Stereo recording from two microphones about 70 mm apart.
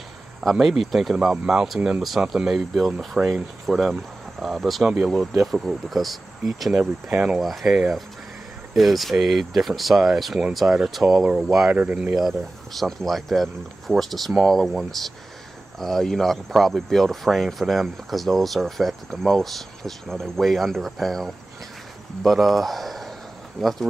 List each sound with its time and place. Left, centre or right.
0.4 s speech: centre
1.1 s speech: centre
6.8 s speech: right
7.3 s speech: centre
11.7 s speech: right
12.2 s speech: centre